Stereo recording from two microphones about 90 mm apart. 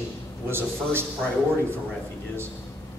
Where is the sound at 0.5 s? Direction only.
25° right (ahead or behind).